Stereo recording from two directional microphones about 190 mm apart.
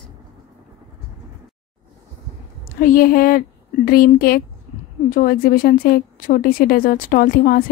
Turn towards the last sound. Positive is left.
turn(degrees=50)  # may be behind; listen again after turning